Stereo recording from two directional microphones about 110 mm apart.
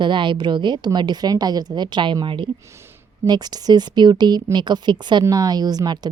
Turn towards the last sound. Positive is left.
turn(degrees=-40)  # may be behind; listen again after turning